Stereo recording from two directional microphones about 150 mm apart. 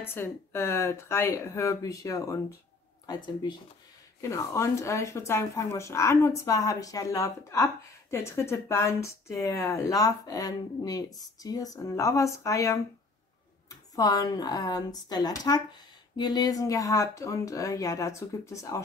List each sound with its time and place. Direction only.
0.0 s speech: 15° left (ahead or behind)
4.2 s speech: 20° left (ahead or behind)